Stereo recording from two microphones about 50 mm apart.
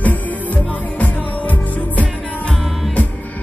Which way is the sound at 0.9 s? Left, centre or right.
Left.